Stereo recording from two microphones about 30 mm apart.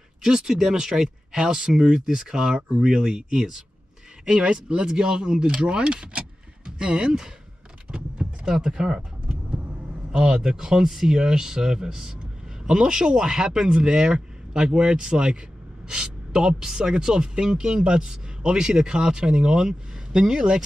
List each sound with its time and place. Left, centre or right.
0.2 s speech: right
1.3 s speech: right
4.3 s speech: right
7.9 s power windows: right
8.5 s speech: centre